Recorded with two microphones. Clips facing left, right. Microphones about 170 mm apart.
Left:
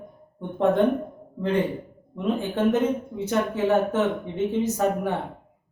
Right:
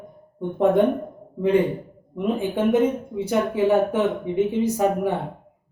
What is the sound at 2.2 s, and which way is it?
Speech, 10° right (ahead or behind).